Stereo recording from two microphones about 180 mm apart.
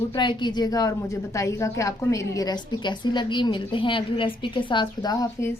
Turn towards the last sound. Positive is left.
turn(degrees=15)  # may be behind; listen again after turning